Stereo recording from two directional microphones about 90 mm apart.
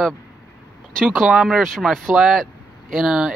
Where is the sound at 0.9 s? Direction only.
Centre (ahead or behind).